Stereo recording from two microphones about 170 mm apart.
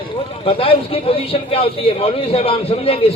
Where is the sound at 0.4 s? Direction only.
35° left (ahead or behind).